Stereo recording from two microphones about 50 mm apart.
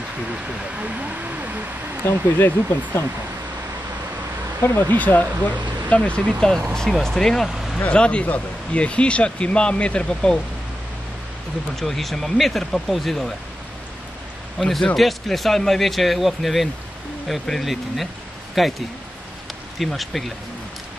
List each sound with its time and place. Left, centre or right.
0.3 s speech: right
2.3 s speech: left
4.7 s speech: left
6.7 s speech: centre
7.4 s speech: centre
7.9 s speech: left
11.7 s speech: centre
14.6 s speech: centre
19.8 s speech: centre